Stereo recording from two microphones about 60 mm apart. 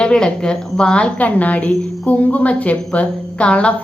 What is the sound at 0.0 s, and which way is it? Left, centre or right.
Speech, centre.